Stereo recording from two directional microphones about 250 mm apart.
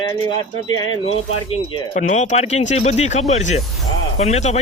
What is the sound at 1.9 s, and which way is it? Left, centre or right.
Speech, left.